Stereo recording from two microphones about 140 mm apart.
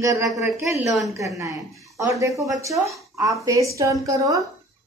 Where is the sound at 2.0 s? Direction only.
25° right (ahead or behind).